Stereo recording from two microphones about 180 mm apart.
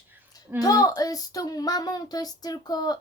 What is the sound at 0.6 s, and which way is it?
Child singing, 20° left (ahead or behind).